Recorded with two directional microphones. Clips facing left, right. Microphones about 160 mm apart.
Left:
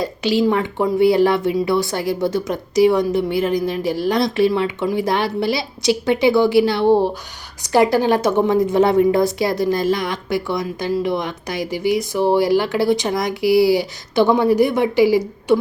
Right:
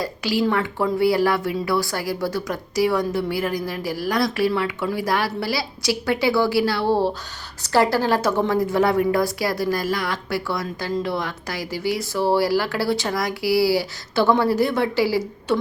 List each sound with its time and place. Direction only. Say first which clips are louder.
0.0 s a woman's voice: left 4 dB; 20° left (ahead or behind)